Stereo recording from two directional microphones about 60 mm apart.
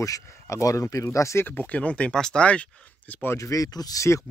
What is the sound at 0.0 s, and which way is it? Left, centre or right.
Speech, left.